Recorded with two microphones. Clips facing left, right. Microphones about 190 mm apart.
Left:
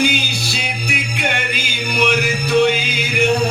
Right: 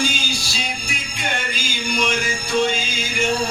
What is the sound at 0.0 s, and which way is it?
Music, 65° left (ahead or behind).